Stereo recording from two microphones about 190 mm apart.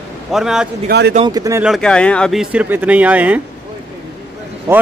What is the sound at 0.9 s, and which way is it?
Speech, 60° right (ahead or behind).